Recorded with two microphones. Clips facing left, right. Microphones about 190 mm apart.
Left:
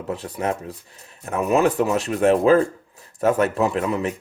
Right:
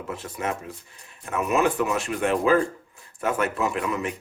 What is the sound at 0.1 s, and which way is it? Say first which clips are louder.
Speech: left 5 dB; 35° left (ahead or behind).